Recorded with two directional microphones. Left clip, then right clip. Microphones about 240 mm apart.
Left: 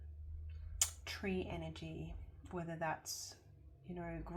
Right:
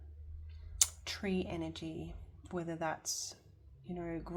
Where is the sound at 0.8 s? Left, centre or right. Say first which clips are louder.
Right 5 dB; right.